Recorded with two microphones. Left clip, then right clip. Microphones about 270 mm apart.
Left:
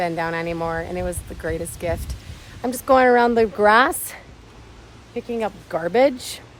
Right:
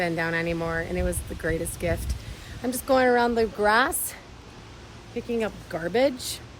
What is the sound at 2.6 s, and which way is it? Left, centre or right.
Speech, left.